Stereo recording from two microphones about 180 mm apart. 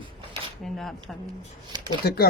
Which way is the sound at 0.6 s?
Centre (ahead or behind).